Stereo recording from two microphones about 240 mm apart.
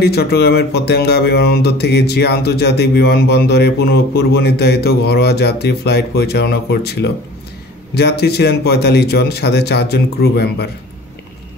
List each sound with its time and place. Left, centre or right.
0.0 s speech: left